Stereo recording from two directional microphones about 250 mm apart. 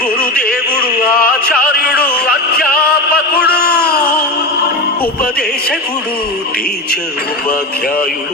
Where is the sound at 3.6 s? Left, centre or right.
Left.